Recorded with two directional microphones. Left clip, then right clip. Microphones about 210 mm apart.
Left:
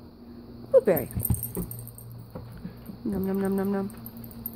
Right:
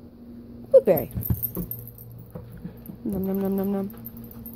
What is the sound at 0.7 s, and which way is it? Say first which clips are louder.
Dog: right 4 dB; 5° right (ahead or behind).